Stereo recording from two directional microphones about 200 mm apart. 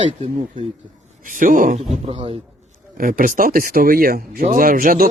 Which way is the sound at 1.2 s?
40° right (ahead or behind).